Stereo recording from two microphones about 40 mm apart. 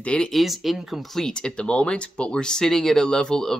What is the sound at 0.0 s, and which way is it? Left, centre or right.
Speech, left.